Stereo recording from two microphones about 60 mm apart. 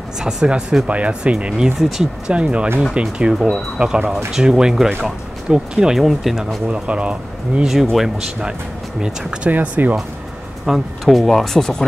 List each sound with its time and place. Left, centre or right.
0.2 s speech: centre
0.8 s speech: right
1.8 s speech: centre
2.2 s speech: centre
3.3 s speech: centre
6.7 s speech: centre
7.8 s speech: centre
9.0 s speech: centre
9.5 s speech: right
10.6 s speech: centre